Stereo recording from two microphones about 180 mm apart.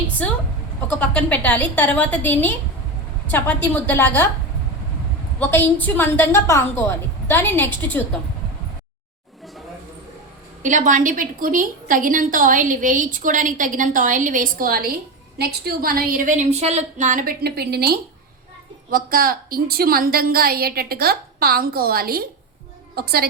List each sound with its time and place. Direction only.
0.9 s a woman's voice: 10° left (ahead or behind)
5.4 s a woman's voice: 10° left (ahead or behind)
10.6 s a woman's voice: 45° right (ahead or behind)